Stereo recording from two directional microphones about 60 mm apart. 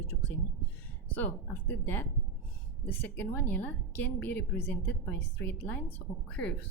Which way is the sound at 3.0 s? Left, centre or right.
Left.